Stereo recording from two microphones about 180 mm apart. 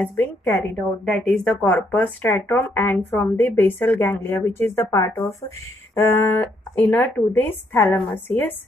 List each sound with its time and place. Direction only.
0.0 s speech: 10° left (ahead or behind)